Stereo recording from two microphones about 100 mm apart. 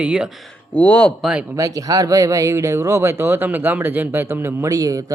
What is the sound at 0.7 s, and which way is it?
Speech, 10° left (ahead or behind).